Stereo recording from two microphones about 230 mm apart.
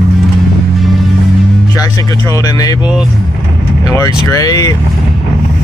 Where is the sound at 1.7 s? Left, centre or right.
Centre.